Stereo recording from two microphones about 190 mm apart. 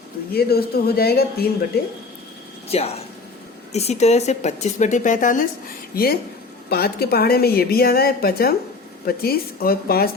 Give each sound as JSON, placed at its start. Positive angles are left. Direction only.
{"t": 0.3, "sound": "speech", "side_deg": 55}
{"t": 2.6, "sound": "a woman's voice", "side_deg": 30}